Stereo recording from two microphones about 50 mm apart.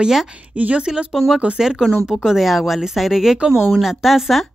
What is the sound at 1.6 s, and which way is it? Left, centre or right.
Speech, centre.